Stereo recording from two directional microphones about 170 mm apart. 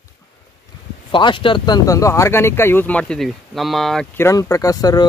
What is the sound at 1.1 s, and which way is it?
Speech, 30° left (ahead or behind).